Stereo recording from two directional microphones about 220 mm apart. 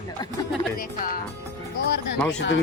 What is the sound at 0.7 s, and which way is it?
Speech, 40° left (ahead or behind).